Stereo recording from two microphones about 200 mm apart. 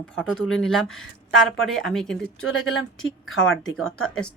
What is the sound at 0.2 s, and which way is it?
Speech, 5° left (ahead or behind).